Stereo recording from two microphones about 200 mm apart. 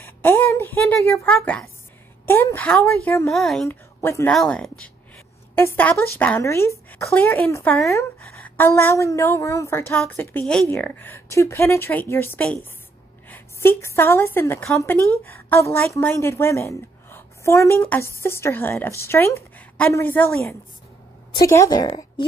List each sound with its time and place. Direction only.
0.0 s a woman's voice: 10° left (ahead or behind)
3.6 s a woman's voice: 15° left (ahead or behind)
4.3 s a woman's voice: 5° left (ahead or behind); by 22.2 s 25° left (ahead or behind)